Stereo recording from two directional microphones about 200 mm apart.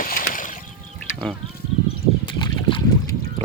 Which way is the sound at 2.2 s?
25° left (ahead or behind).